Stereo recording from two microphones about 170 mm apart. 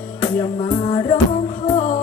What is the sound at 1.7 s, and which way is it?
Music, 40° left (ahead or behind).